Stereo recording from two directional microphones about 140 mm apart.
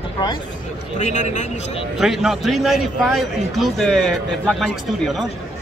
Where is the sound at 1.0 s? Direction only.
55° left (ahead or behind).